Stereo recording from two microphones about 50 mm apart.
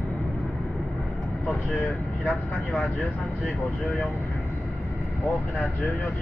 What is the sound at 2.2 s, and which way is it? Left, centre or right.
Speech, left.